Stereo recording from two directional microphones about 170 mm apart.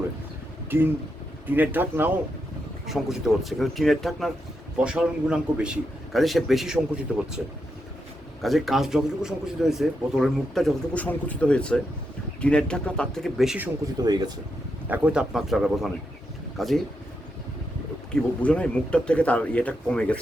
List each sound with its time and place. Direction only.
0.7 s a man's voice: 10° right (ahead or behind)
14.0 s speech: 25° right (ahead or behind)
14.8 s a man's voice: 10° right (ahead or behind)
18.1 s speech: 5° left (ahead or behind)